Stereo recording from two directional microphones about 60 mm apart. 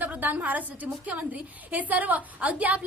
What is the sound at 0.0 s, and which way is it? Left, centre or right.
A woman's voice, right.